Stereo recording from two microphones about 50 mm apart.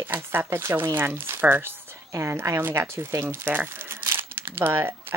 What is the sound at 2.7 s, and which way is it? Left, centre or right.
Speech, right.